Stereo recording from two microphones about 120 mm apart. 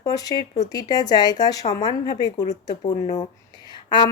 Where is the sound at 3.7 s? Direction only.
40° left (ahead or behind).